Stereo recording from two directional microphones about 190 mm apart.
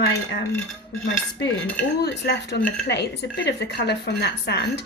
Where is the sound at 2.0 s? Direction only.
65° left (ahead or behind).